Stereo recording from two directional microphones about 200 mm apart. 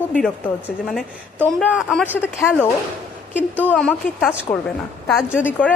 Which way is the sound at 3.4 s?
10° right (ahead or behind).